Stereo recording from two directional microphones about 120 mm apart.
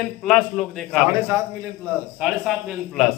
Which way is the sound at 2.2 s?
5° right (ahead or behind).